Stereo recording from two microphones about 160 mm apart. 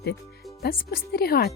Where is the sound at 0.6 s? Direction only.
65° left (ahead or behind).